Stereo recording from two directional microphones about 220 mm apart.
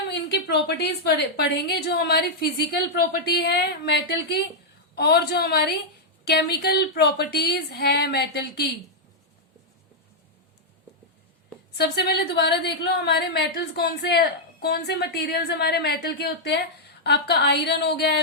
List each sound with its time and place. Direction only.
0.1 s a woman's voice: 50° left (ahead or behind)
11.8 s a woman's voice: 45° left (ahead or behind)